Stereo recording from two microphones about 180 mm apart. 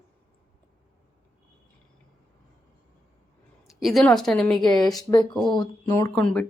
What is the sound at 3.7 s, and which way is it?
Speech, centre (ahead or behind).